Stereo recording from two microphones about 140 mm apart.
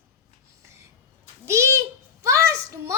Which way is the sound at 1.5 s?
20° right (ahead or behind).